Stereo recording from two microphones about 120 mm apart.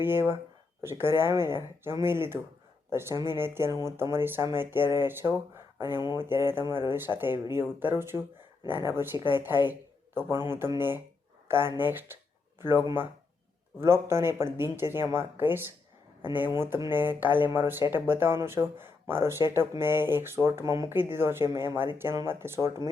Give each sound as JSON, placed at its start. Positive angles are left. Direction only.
{"t": 0.0, "sound": "speech", "side_deg": -20}
{"t": 5.9, "sound": "speech", "side_deg": 35}
{"t": 6.1, "sound": "speech", "side_deg": -20}